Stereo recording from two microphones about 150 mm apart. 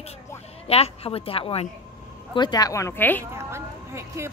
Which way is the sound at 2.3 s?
25° left (ahead or behind).